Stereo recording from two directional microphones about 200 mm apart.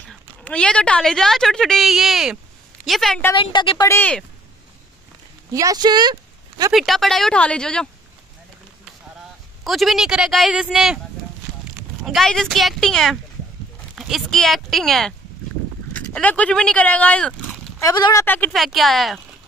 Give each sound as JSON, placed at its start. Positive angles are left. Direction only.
{"t": 0.1, "sound": "a woman's voice", "side_deg": 5}
{"t": 3.3, "sound": "a woman's voice", "side_deg": 25}
{"t": 5.5, "sound": "speech", "side_deg": -15}
{"t": 6.7, "sound": "a woman's voice", "side_deg": 0}
{"t": 9.7, "sound": "a woman's voice", "side_deg": 0}
{"t": 12.0, "sound": "a woman's voice", "side_deg": 0}